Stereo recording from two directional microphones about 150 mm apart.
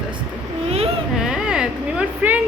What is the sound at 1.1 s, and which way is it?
Speech, 5° right (ahead or behind).